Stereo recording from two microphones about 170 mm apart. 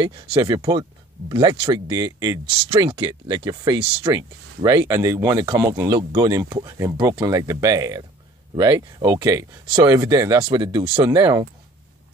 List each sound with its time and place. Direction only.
0.0 s speech: 30° right (ahead or behind)